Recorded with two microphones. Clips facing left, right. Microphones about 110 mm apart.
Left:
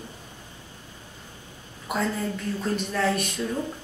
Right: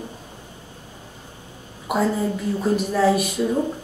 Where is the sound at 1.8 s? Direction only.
5° right (ahead or behind).